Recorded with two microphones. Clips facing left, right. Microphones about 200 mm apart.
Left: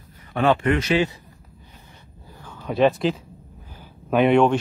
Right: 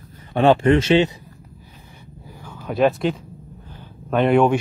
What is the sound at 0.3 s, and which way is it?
Speech, 30° right (ahead or behind).